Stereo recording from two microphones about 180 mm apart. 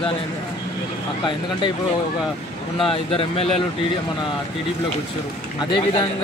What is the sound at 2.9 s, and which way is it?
Speech, 30° left (ahead or behind).